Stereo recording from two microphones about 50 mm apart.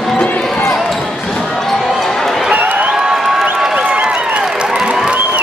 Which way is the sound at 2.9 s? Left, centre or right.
Centre.